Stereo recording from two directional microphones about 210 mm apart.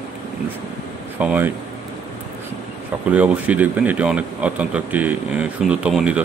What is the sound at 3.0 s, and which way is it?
Speech, 5° right (ahead or behind).